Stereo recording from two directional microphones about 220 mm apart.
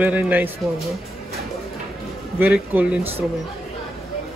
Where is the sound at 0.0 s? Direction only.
10° right (ahead or behind).